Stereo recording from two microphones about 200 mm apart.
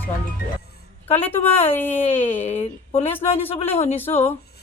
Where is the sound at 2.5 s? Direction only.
30° left (ahead or behind).